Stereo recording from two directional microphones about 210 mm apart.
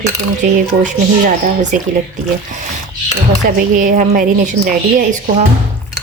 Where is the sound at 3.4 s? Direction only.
40° right (ahead or behind).